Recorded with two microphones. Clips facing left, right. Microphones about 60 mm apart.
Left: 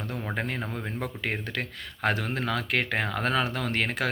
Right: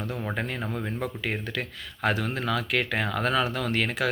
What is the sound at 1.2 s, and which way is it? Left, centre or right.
Speech, left.